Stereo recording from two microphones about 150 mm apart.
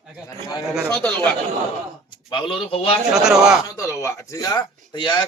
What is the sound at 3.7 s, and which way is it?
Speech, 20° left (ahead or behind).